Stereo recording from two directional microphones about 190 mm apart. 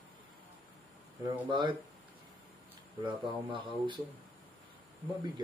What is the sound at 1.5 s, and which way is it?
Speech, 25° right (ahead or behind).